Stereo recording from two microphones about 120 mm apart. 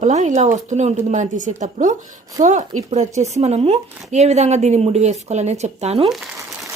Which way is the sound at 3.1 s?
70° right (ahead or behind).